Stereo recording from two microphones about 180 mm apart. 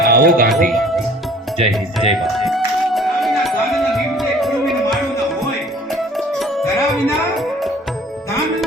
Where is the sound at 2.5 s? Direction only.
Centre (ahead or behind).